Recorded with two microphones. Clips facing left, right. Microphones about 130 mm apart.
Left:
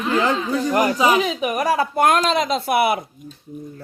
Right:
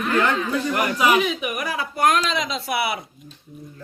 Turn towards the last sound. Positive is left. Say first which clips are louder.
# left 6 dB
turn(degrees=50)  # may be behind; listen again after turning